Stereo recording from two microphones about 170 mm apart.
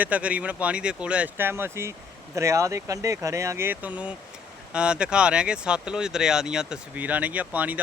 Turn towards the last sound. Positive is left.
turn(degrees=-10)  # may be behind; listen again after turning